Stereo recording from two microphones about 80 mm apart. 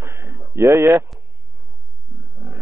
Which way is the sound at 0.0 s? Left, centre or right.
Right.